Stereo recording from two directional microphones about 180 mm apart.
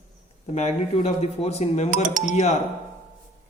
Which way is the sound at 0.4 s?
35° left (ahead or behind).